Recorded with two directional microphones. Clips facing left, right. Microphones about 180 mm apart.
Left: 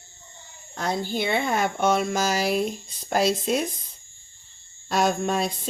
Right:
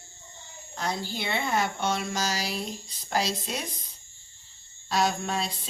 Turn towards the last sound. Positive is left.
turn(degrees=50)  # may be behind; listen again after turning